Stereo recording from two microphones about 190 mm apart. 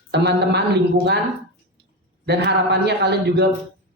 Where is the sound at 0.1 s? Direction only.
60° right (ahead or behind).